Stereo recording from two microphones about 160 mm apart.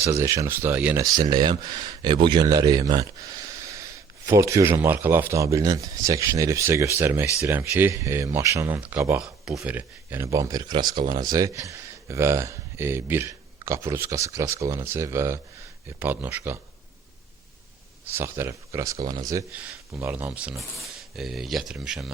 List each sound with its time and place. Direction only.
0.0 s speech: 20° right (ahead or behind)
1.0 s speech: 25° right (ahead or behind)
18.1 s speech: 15° right (ahead or behind)